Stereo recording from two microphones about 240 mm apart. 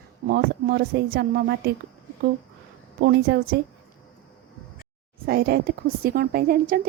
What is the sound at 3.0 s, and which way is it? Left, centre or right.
Speech, right.